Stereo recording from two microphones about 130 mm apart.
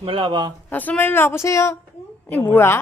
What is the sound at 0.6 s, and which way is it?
A woman's voice, 15° left (ahead or behind).